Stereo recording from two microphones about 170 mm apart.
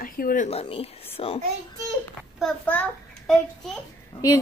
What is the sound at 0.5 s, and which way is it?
Speech, 35° left (ahead or behind).